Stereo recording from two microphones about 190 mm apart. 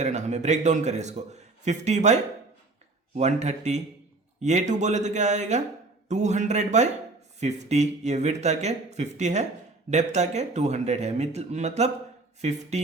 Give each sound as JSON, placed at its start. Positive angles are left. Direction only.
{"t": 0.0, "sound": "a man's voice", "side_deg": -40}
{"t": 3.2, "sound": "a man's voice", "side_deg": -35}